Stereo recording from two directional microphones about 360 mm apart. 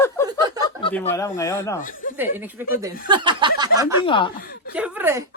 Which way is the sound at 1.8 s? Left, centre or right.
Left.